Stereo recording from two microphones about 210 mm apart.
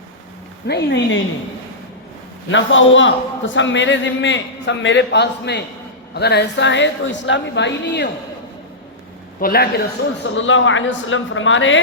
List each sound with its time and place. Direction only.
0.7 s a man's voice: 55° left (ahead or behind)
2.5 s a man's voice: 65° left (ahead or behind)
9.4 s a man's voice: 45° left (ahead or behind)
10.2 s a man's voice: 65° left (ahead or behind)